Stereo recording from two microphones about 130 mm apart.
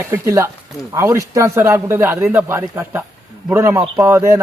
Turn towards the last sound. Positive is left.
turn(degrees=-20)  # may be behind; listen again after turning